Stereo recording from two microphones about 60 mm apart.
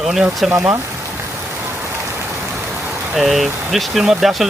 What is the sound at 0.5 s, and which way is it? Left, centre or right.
Speech, right.